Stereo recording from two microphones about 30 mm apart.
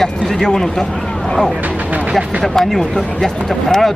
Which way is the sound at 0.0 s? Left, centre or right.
Centre.